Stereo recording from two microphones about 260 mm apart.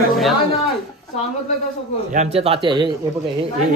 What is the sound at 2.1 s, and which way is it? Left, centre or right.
Speech, right.